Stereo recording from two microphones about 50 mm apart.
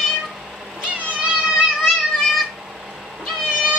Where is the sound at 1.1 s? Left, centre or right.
Right.